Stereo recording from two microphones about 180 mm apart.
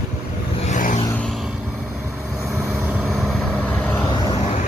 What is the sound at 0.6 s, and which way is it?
Vehicle, 45° left (ahead or behind).